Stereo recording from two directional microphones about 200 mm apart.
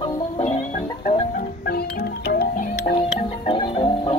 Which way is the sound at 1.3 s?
45° left (ahead or behind).